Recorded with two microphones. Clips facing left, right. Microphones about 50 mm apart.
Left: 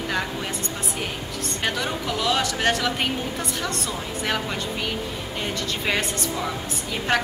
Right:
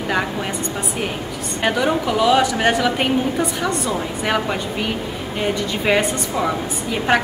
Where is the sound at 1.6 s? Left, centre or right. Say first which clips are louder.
Right 9 dB; centre.